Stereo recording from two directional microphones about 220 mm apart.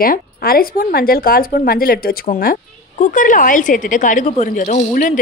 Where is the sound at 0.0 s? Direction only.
40° left (ahead or behind).